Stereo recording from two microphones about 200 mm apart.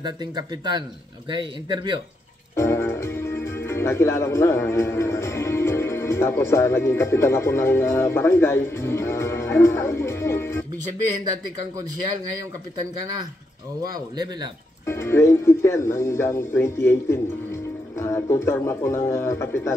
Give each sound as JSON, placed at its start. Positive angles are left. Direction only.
{"t": 0.0, "sound": "speech", "side_deg": -20}
{"t": 2.5, "sound": "speech", "side_deg": 15}
{"t": 13.9, "sound": "speech", "side_deg": -20}
{"t": 14.9, "sound": "speech", "side_deg": 10}